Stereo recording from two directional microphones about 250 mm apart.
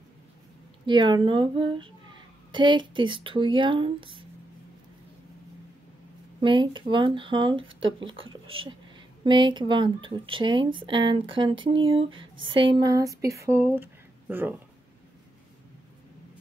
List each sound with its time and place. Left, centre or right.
0.8 s speech: centre
6.4 s speech: centre